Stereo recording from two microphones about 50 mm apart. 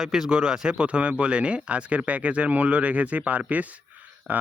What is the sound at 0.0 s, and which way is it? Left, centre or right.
Speech, centre.